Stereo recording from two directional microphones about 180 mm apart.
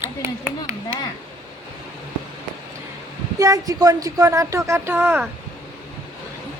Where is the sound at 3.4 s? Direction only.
20° right (ahead or behind).